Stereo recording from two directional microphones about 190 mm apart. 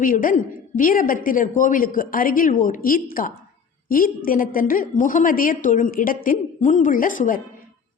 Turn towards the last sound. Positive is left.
turn(degrees=45)  # may be behind; listen again after turning